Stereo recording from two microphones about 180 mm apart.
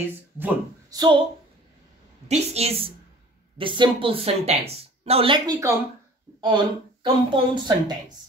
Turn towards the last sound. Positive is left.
turn(degrees=-25)  # may be behind; listen again after turning